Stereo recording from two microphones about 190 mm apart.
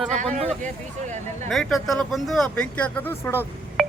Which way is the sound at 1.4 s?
Centre (ahead or behind).